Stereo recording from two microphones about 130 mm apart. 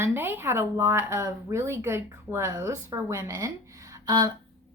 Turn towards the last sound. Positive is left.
turn(degrees=-30)  # may be behind; listen again after turning